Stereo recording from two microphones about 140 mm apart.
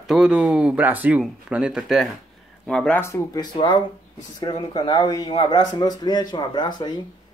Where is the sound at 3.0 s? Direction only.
20° left (ahead or behind).